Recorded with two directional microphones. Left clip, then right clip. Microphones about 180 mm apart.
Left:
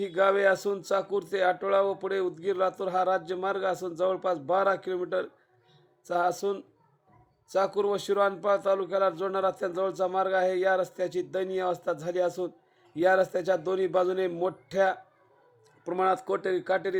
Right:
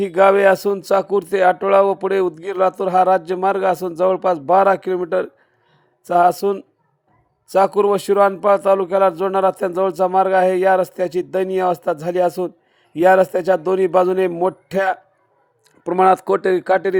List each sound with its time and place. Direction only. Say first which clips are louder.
0.0 s speech: right 11 dB; 40° right (ahead or behind)